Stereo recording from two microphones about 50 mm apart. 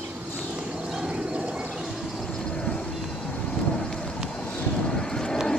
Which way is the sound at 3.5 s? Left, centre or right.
Centre.